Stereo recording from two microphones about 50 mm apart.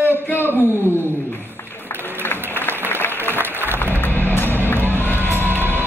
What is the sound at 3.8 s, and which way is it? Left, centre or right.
Music, left.